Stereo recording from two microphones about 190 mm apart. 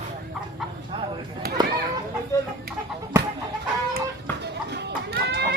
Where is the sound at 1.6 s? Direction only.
20° right (ahead or behind).